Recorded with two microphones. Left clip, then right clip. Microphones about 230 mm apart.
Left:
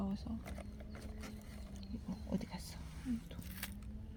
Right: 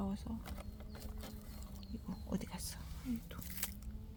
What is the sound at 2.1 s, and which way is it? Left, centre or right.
Speech, centre.